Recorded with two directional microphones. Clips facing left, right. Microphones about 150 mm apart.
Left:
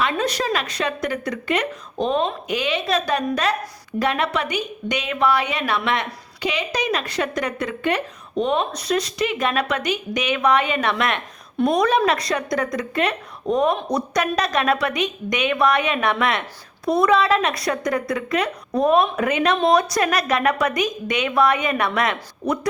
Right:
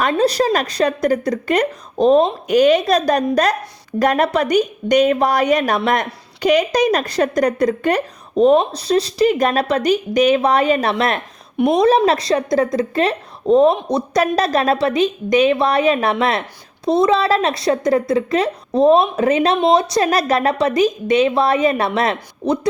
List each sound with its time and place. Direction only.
0.1 s a woman's voice: 35° right (ahead or behind)
11.5 s a woman's voice: 20° right (ahead or behind)